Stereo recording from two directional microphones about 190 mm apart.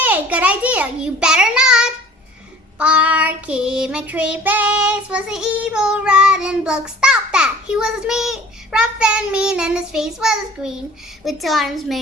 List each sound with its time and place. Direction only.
0.0 s a child's voice: 10° right (ahead or behind)
2.7 s child singing: 5° right (ahead or behind)